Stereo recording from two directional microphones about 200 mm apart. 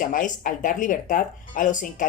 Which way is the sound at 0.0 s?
40° left (ahead or behind).